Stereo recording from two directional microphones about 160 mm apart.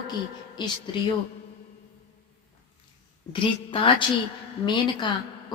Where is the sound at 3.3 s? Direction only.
35° left (ahead or behind).